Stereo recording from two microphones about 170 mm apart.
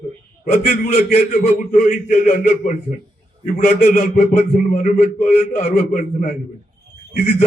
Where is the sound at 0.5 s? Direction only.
55° left (ahead or behind).